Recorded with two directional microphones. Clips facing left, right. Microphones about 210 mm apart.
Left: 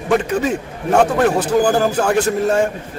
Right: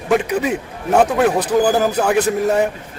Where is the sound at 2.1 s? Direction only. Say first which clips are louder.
Even; 15° right (ahead or behind).